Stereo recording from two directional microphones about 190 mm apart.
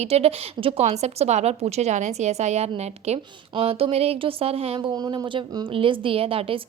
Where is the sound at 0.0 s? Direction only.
35° right (ahead or behind).